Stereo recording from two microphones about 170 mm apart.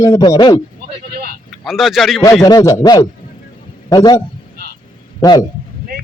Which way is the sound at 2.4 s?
20° left (ahead or behind).